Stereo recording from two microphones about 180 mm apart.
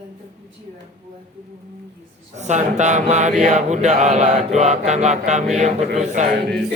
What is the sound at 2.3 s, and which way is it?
Mantra, 40° right (ahead or behind).